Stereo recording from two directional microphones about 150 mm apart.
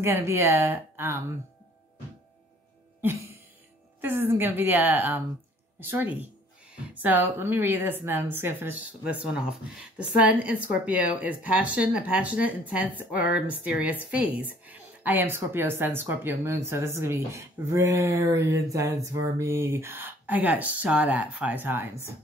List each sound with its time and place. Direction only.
0.0 s a woman's voice: 15° right (ahead or behind)
4.0 s a woman's voice: 15° right (ahead or behind)